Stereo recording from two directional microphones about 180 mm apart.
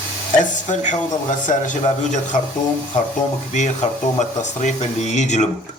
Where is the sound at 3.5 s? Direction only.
40° left (ahead or behind).